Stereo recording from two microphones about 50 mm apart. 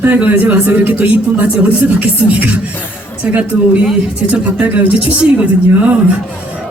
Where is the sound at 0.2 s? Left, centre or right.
Right.